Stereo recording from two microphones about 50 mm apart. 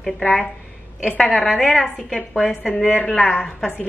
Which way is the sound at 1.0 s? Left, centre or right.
Centre.